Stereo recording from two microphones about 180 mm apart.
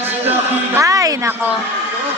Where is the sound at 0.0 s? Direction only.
10° right (ahead or behind).